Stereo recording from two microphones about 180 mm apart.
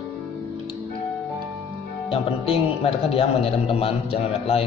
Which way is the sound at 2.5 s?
35° left (ahead or behind).